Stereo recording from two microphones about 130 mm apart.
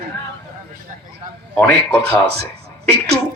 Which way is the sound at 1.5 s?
20° left (ahead or behind).